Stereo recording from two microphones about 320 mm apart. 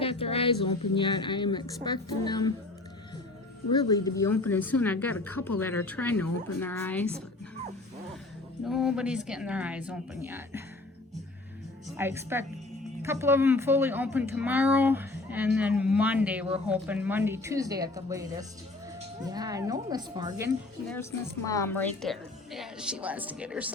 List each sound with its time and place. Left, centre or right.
0.0 s a woman's voice: centre
3.7 s a woman's voice: centre
8.6 s a woman's voice: centre
11.9 s a woman's voice: centre
20.9 s a woman's voice: centre